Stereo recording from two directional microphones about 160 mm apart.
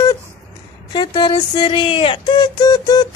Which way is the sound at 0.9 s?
25° left (ahead or behind).